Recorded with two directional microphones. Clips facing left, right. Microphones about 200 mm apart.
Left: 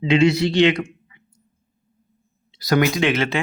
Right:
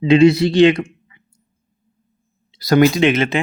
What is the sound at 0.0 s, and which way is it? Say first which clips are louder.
Speech: right 6 dB; 35° right (ahead or behind).